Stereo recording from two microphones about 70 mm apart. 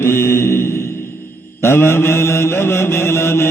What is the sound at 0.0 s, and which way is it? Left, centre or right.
Mantra, left.